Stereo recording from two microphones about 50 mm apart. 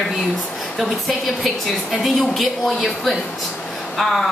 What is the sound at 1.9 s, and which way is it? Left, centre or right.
A woman's voice, centre.